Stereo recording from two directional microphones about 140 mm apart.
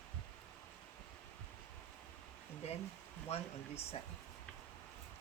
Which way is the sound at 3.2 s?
50° left (ahead or behind).